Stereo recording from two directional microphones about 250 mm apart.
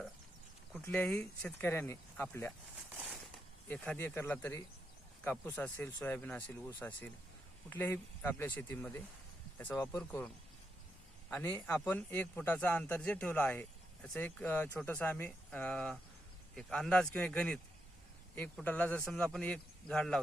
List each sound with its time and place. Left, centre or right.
0.7 s a man's voice: centre
2.9 s a sound: centre
3.7 s a man's voice: centre